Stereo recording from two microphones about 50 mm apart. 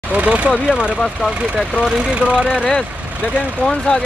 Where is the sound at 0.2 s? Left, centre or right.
Right.